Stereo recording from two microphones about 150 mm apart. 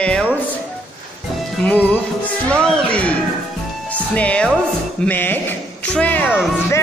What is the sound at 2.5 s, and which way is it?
Speech, 5° left (ahead or behind).